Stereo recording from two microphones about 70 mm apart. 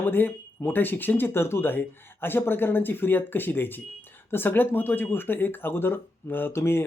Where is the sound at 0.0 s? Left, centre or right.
Left.